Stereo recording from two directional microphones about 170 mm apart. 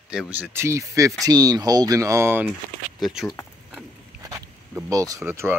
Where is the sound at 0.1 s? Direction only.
5° right (ahead or behind).